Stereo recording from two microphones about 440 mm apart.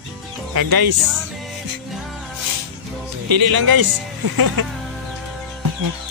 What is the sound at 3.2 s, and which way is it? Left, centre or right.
Speech, right.